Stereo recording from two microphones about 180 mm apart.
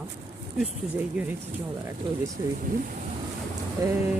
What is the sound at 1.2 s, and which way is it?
Speech, 5° right (ahead or behind).